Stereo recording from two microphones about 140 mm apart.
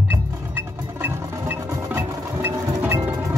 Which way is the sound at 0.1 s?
15° right (ahead or behind).